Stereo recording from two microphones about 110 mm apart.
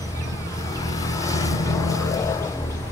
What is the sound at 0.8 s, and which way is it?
Vehicle, 30° left (ahead or behind).